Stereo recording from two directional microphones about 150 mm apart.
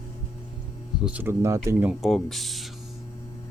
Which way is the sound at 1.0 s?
10° right (ahead or behind).